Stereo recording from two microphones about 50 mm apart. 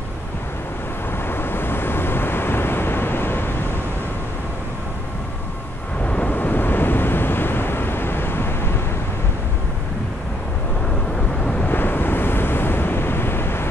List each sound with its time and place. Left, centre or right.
1.3 s vehicle: left
6.0 s vehicle: left
6.3 s waves: left
11.4 s wind noise: left
11.7 s waves: left